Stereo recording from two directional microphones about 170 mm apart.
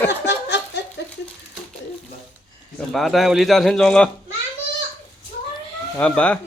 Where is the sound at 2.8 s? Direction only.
Centre (ahead or behind).